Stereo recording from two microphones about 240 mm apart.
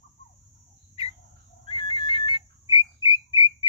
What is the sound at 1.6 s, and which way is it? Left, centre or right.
Whistle, left.